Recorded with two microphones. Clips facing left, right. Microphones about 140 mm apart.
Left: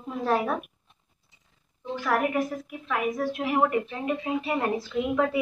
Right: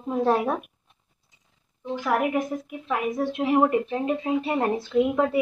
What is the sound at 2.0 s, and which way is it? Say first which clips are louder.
A woman's voice: right 1 dB; 15° right (ahead or behind).